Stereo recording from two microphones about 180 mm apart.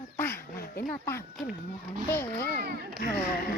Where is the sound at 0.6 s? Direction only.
55° left (ahead or behind).